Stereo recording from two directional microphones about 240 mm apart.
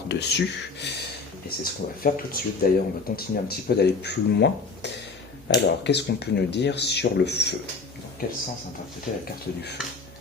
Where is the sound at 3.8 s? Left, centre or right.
Left.